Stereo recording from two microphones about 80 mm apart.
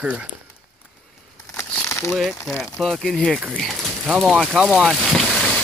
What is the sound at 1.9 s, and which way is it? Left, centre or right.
Crumpling, left.